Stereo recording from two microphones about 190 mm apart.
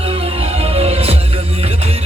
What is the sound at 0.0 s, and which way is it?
Music, 30° right (ahead or behind).